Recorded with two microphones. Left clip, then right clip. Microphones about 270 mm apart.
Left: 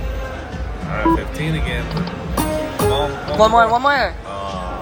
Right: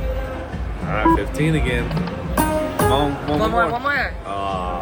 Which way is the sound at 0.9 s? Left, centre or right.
Right.